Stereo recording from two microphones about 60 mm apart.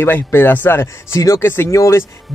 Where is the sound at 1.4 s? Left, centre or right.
Left.